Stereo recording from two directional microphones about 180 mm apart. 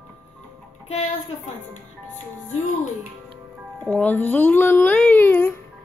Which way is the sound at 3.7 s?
10° left (ahead or behind).